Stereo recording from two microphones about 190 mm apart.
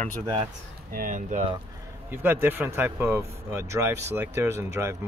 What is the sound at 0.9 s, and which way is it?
Speech, 45° right (ahead or behind).